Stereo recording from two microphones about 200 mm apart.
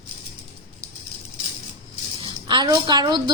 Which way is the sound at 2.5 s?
20° right (ahead or behind).